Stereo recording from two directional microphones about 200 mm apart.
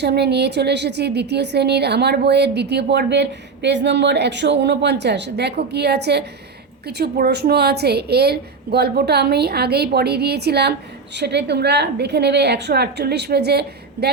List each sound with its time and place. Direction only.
0.0 s a woman's voice: 55° right (ahead or behind)